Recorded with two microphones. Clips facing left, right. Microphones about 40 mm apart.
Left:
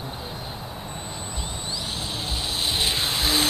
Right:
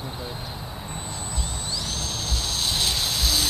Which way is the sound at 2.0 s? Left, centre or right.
Centre.